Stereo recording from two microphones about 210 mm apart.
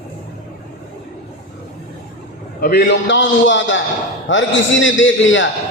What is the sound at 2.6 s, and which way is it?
A man's voice, 50° left (ahead or behind).